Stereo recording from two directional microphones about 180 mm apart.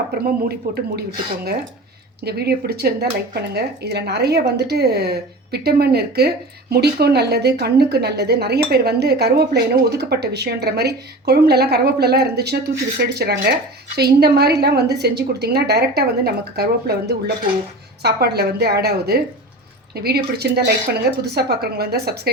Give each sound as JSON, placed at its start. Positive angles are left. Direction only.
{"t": 0.4, "sound": "a woman's voice", "side_deg": -60}
{"t": 2.2, "sound": "a woman's voice", "side_deg": -60}